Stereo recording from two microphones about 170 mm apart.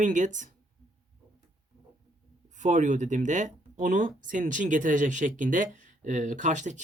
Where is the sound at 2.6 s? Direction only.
45° right (ahead or behind).